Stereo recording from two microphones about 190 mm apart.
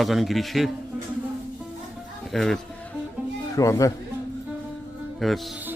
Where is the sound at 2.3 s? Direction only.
Centre (ahead or behind).